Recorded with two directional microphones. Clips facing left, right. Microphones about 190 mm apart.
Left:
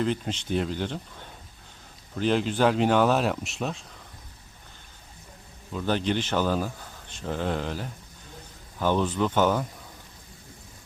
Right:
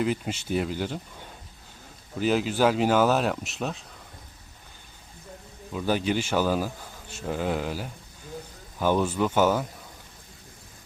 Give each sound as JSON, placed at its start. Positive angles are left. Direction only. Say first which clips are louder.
{"t": 0.0, "sound": "speech", "louder": "even", "side_deg": -10}
{"t": 2.1, "sound": "speech", "louder": "even", "side_deg": -5}
{"t": 5.7, "sound": "speech", "louder": "right 1 dB", "side_deg": -10}